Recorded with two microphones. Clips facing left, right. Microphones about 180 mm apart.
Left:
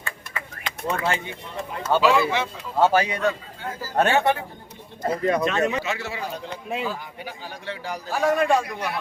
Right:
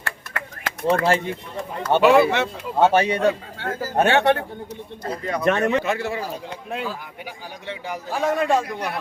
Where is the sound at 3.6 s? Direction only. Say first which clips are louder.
Right 1 dB; 60° right (ahead or behind).